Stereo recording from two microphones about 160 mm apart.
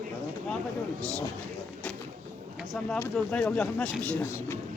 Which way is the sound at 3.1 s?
5° left (ahead or behind).